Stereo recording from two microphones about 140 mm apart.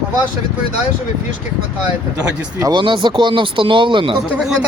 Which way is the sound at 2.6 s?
35° right (ahead or behind).